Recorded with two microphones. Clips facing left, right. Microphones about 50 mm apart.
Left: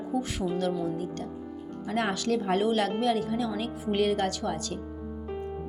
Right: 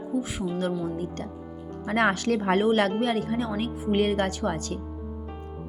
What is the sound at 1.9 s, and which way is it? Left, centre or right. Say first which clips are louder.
Speech: right 6 dB; right.